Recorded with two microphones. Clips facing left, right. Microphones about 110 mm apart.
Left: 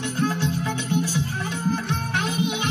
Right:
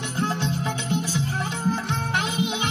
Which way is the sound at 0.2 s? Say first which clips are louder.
Left 1 dB; 20° right (ahead or behind).